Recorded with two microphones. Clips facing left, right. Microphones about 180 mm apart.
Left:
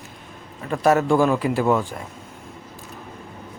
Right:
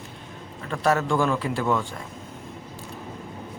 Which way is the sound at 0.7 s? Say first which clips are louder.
Left 5 dB; 15° left (ahead or behind).